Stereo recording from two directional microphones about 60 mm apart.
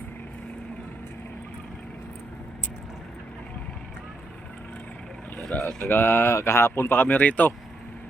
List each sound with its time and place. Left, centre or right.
5.5 s speech: centre
5.9 s speech: left